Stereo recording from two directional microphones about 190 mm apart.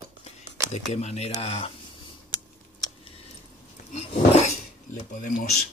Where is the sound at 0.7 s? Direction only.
35° left (ahead or behind).